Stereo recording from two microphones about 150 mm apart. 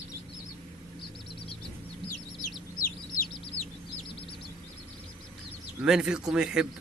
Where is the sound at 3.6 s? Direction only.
10° left (ahead or behind).